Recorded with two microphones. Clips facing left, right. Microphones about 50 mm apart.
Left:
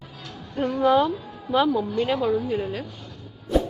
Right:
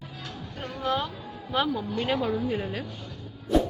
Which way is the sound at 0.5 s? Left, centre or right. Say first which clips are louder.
Left 10 dB; centre.